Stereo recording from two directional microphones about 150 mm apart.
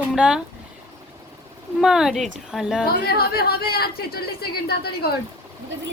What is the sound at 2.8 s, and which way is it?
Speech, 90° left.